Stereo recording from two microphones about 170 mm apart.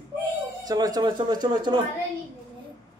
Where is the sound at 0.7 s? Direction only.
20° right (ahead or behind).